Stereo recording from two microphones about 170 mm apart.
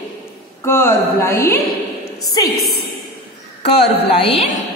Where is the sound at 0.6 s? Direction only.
15° left (ahead or behind).